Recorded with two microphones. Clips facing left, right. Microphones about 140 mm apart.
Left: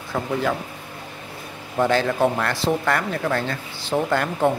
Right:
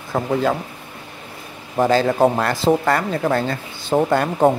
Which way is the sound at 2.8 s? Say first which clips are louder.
Right 4 dB; 20° right (ahead or behind).